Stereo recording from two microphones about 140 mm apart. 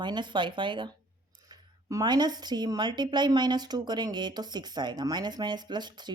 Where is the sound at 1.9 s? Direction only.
30° right (ahead or behind).